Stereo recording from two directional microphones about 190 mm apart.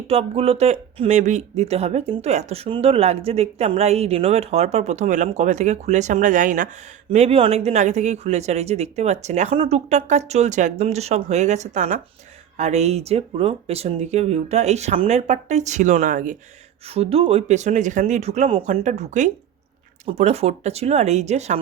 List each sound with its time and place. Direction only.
0.1 s speech: 30° right (ahead or behind)
16.8 s speech: 30° right (ahead or behind)